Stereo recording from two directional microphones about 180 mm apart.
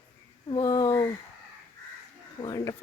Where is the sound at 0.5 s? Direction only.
20° left (ahead or behind).